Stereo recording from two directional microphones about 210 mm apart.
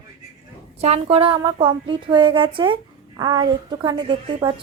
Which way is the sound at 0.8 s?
30° right (ahead or behind).